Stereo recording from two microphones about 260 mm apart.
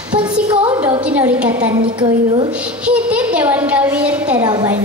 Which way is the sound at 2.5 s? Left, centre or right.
Centre.